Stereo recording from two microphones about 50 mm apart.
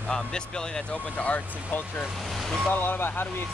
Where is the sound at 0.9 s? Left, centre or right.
Left.